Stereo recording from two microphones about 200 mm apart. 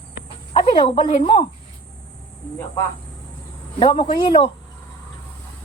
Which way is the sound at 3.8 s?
25° left (ahead or behind).